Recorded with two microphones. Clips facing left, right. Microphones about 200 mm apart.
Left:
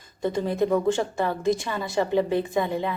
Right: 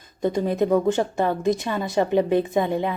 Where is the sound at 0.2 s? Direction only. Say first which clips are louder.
Right 2 dB; 20° right (ahead or behind).